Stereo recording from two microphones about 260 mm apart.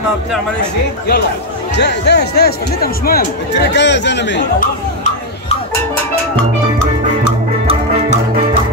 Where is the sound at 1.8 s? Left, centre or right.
Left.